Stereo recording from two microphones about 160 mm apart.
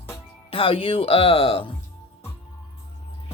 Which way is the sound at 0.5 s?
35° left (ahead or behind).